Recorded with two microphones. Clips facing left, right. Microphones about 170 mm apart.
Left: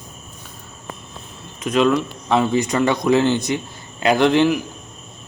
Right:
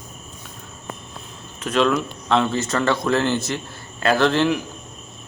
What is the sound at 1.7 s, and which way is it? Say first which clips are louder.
A man's voice: left 3 dB; 5° left (ahead or behind).